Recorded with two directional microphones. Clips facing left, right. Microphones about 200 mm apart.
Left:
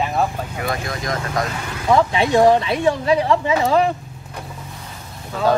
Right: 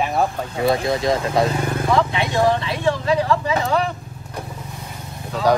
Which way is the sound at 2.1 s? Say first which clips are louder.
Left 5 dB; 30° left (ahead or behind).